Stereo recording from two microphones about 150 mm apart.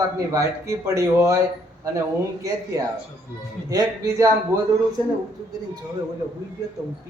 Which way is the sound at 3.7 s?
20° right (ahead or behind).